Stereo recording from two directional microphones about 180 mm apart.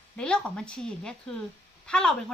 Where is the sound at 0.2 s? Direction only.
5° left (ahead or behind).